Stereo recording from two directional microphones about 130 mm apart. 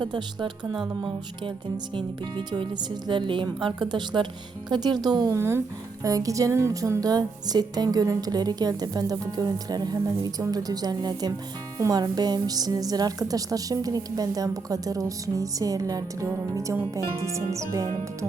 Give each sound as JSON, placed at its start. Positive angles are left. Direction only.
{"t": 0.0, "sound": "speech", "side_deg": -35}
{"t": 2.0, "sound": "speech", "side_deg": -40}